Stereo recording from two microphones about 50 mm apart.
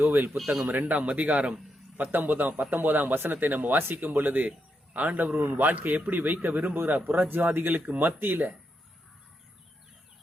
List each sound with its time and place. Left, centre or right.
0.0 s speech: right
2.0 s a man's voice: right